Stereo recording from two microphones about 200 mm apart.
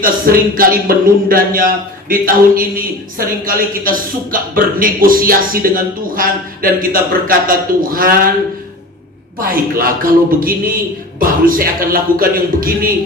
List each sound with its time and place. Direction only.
0.0 s a man's voice: 45° right (ahead or behind)
9.4 s a man's voice: 45° right (ahead or behind)